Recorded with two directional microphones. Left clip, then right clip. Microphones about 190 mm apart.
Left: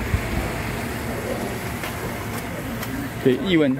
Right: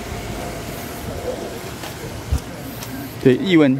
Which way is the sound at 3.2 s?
50° right (ahead or behind).